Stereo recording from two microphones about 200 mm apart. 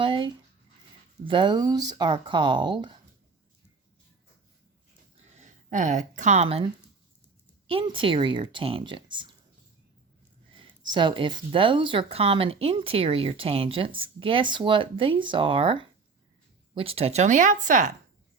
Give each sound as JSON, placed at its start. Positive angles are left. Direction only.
{"t": 0.0, "sound": "speech", "side_deg": -25}
{"t": 5.4, "sound": "speech", "side_deg": -40}
{"t": 7.7, "sound": "speech", "side_deg": -25}
{"t": 10.6, "sound": "speech", "side_deg": -25}